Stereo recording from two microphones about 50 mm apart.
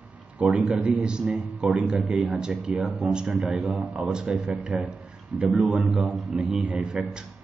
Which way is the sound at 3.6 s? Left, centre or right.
Right.